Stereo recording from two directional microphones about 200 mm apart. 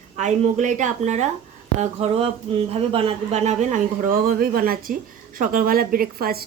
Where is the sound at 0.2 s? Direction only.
35° right (ahead or behind).